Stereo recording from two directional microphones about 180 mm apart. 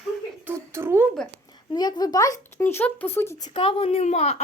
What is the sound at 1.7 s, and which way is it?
Speech, 20° left (ahead or behind).